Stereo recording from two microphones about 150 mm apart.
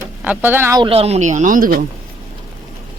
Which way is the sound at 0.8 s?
40° right (ahead or behind).